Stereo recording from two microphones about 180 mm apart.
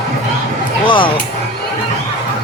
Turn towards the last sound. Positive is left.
turn(degrees=30)  # may be behind; listen again after turning